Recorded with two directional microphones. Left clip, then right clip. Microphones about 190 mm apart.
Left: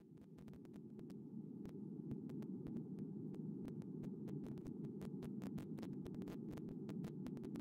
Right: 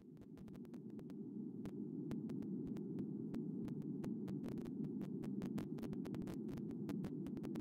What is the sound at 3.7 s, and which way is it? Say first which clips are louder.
Hum: right 4 dB; centre (ahead or behind).